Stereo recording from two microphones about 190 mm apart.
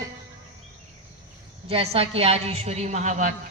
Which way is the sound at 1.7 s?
30° right (ahead or behind).